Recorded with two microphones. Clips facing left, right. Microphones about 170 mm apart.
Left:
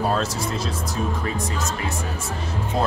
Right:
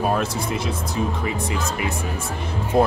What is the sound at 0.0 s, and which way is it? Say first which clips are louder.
Speech: right 1 dB; 15° right (ahead or behind).